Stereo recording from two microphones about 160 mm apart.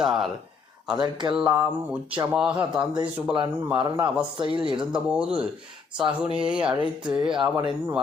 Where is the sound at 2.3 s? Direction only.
5° right (ahead or behind).